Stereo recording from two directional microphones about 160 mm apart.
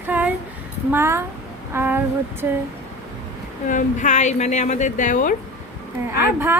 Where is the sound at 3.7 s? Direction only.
50° left (ahead or behind).